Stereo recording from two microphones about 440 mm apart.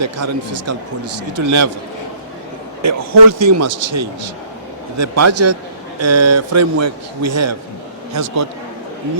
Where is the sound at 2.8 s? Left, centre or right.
Right.